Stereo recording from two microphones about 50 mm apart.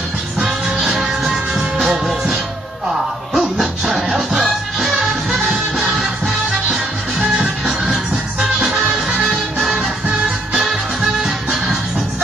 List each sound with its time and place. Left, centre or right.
0.5 s music: centre
3.3 s music: centre
10.6 s music: centre